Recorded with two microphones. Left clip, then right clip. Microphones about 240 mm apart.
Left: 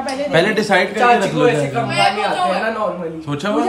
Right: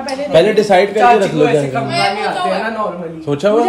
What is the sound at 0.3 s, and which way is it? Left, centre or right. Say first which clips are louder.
Speech: right 6 dB; left.